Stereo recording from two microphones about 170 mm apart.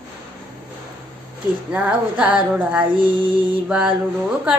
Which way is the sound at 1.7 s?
10° right (ahead or behind).